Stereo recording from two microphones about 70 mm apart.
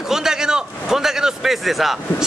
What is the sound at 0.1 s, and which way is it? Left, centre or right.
A man's voice, centre.